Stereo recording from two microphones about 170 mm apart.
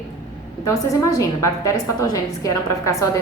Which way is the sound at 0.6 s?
20° left (ahead or behind).